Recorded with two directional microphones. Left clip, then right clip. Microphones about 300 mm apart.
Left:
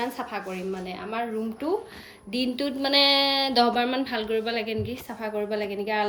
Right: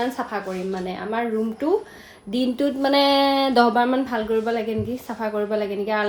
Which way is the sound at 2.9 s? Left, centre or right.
Right.